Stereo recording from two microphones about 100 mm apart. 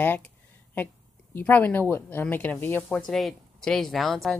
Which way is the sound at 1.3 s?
20° left (ahead or behind).